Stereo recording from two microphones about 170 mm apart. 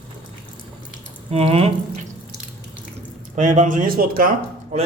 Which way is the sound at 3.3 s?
45° right (ahead or behind).